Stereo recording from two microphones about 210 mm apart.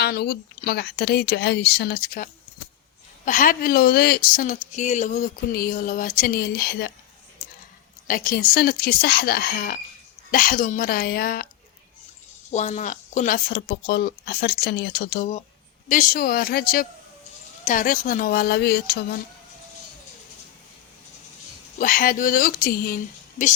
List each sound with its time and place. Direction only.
0.0 s speech: 50° left (ahead or behind)
8.0 s speech: 40° left (ahead or behind)
12.5 s speech: 35° left (ahead or behind)
21.8 s speech: 40° left (ahead or behind)